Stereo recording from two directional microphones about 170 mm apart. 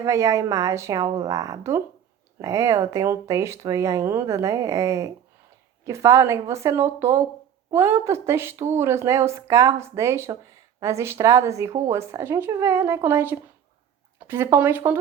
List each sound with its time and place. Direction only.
0.0 s a woman's voice: 20° right (ahead or behind)